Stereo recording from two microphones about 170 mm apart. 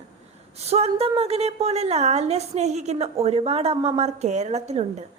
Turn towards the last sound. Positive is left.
turn(degrees=-40)  # may be behind; listen again after turning